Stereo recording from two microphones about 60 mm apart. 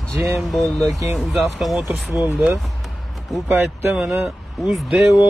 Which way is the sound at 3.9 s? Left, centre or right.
Centre.